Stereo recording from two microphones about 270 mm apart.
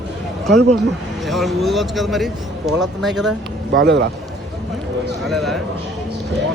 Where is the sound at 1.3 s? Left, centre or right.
Centre.